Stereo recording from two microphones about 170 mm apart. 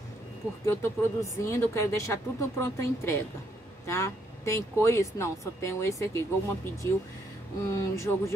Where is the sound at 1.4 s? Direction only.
15° left (ahead or behind).